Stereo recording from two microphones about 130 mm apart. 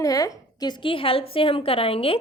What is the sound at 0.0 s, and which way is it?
A woman's voice, 25° left (ahead or behind).